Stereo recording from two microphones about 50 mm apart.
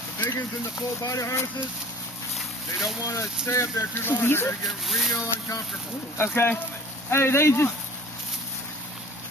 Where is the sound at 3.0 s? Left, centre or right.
Left.